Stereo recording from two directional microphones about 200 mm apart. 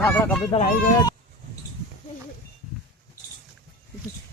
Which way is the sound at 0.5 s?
25° left (ahead or behind).